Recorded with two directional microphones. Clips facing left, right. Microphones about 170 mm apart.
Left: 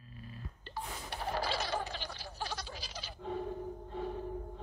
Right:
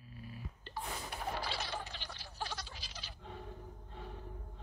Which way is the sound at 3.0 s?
90° left.